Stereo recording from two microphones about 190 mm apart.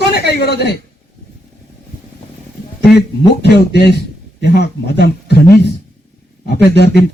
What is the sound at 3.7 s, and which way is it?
Speech, 60° left (ahead or behind).